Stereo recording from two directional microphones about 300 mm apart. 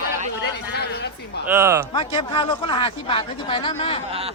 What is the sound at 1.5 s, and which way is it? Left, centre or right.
Speech, centre.